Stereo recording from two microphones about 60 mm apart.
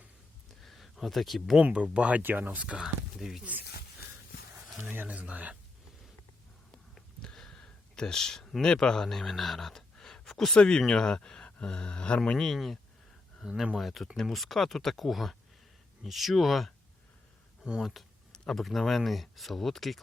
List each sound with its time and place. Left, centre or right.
0.6 s a sound: centre
1.6 s speech: centre
2.8 s speech: centre
4.9 s speech: right
6.9 s a sound: centre
10.2 s speech: centre
12.4 s speech: centre
17.7 s speech: centre
18.3 s speech: centre